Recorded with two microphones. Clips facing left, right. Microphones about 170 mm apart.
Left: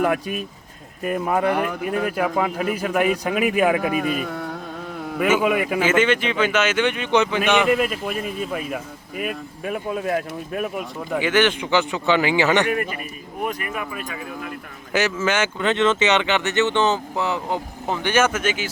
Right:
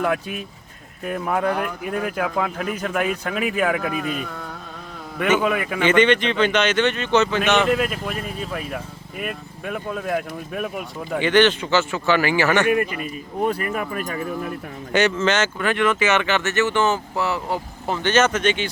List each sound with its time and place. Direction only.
0.0 s speech: 10° left (ahead or behind)
5.2 s speech: 10° left (ahead or behind)
13.4 s speech: 30° right (ahead or behind)
13.7 s speech: 45° right (ahead or behind)
14.9 s speech: 5° left (ahead or behind)
15.6 s speech: 25° left (ahead or behind); by 18.7 s 5° left (ahead or behind)